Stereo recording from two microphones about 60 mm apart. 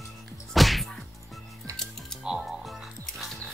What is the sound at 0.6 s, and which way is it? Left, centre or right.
Whip, centre.